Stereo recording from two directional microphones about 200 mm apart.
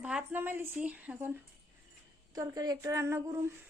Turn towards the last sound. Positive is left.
turn(degrees=-15)  # may be behind; listen again after turning